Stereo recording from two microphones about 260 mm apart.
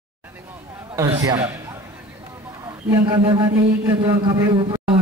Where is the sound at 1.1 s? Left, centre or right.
Centre.